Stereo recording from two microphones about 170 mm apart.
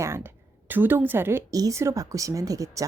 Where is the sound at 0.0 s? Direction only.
15° right (ahead or behind).